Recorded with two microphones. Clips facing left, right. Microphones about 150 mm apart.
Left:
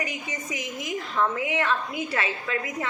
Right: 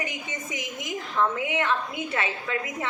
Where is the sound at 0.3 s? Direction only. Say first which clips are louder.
Left 1 dB; 25° right (ahead or behind).